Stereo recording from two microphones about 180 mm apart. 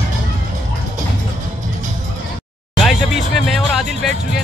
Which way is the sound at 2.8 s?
Centre (ahead or behind).